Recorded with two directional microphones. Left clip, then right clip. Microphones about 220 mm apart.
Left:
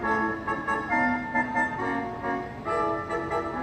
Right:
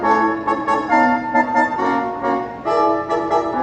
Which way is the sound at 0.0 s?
50° right (ahead or behind).